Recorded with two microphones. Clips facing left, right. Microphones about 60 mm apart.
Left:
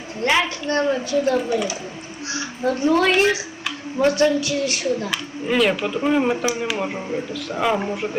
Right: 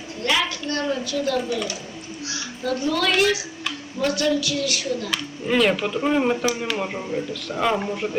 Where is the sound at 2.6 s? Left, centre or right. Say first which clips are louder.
Left 5 dB; left.